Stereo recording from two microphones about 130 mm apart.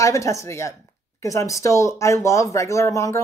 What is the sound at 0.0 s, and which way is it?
Speech, 25° left (ahead or behind).